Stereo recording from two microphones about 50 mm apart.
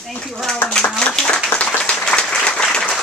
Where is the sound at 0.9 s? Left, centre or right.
Centre.